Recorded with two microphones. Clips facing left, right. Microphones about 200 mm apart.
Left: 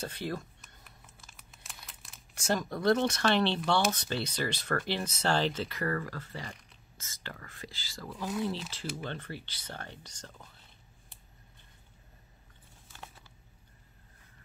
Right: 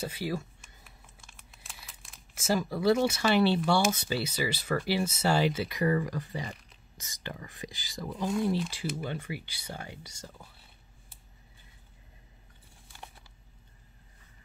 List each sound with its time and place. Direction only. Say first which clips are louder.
0.0 s speech: right 3 dB; 10° right (ahead or behind)